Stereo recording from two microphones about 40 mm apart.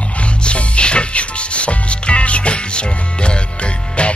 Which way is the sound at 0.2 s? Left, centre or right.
Left.